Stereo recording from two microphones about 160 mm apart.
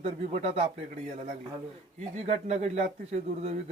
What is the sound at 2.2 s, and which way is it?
Speech, 45° right (ahead or behind).